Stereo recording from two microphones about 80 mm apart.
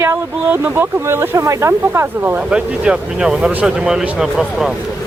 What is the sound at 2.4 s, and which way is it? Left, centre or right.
Speech, centre.